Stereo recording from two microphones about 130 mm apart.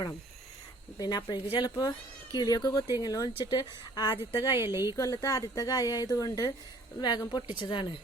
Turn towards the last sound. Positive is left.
turn(degrees=40)  # may be behind; listen again after turning